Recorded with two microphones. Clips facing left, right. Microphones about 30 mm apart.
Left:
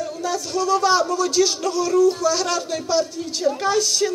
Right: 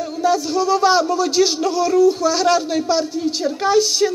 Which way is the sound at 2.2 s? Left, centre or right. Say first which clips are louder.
Right 5 dB; centre.